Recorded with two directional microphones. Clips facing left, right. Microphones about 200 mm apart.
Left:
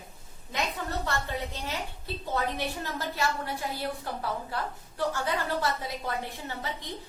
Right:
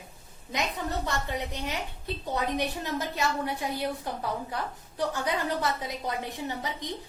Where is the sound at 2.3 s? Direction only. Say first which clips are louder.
Right 1 dB; 20° right (ahead or behind).